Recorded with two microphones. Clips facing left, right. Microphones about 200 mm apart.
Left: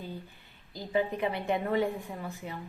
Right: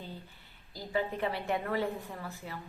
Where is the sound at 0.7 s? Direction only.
20° left (ahead or behind).